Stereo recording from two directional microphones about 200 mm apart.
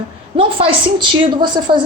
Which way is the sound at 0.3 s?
25° right (ahead or behind).